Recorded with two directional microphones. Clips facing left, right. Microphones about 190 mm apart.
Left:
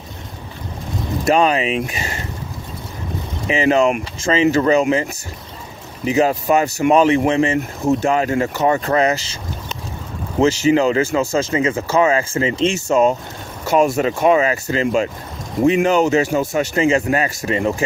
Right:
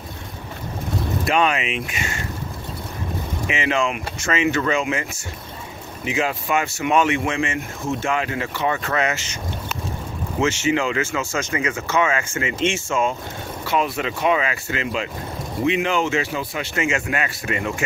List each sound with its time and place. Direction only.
1.2 s speech: 35° left (ahead or behind)
3.4 s speech: 35° left (ahead or behind)
6.0 s speech: 40° left (ahead or behind)
10.4 s speech: 35° left (ahead or behind)